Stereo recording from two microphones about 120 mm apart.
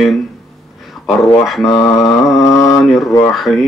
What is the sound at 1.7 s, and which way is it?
Mantra, 25° left (ahead or behind).